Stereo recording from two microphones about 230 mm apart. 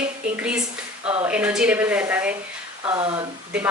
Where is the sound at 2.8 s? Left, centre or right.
Right.